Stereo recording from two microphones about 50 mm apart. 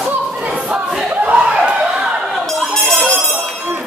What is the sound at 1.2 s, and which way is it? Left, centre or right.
Chuckle, right.